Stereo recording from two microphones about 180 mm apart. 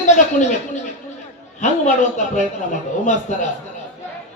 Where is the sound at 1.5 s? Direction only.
40° left (ahead or behind).